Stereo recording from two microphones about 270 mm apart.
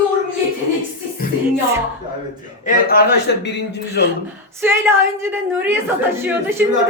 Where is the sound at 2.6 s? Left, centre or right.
Left.